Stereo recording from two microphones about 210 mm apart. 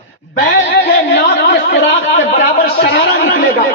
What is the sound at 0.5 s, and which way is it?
Speech, 60° left (ahead or behind).